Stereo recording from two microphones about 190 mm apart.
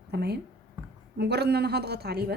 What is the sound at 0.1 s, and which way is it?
A woman's voice, 60° right (ahead or behind).